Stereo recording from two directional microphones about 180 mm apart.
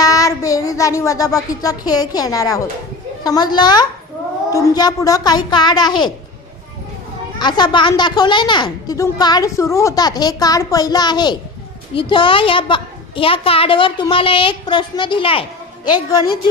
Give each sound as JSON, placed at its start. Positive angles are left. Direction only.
{"t": 0.0, "sound": "a sound", "side_deg": 20}
{"t": 3.2, "sound": "a woman's voice", "side_deg": 20}
{"t": 7.3, "sound": "a woman's voice", "side_deg": 25}